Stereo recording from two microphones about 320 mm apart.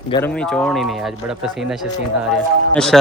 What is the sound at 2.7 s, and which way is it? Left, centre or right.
Speech, centre.